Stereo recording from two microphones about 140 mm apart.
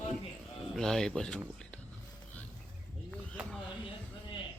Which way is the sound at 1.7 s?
10° left (ahead or behind).